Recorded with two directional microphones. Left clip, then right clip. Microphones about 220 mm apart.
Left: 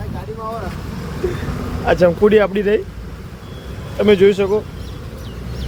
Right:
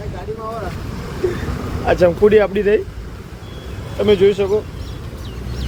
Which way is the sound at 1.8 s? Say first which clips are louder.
Even; 5° left (ahead or behind).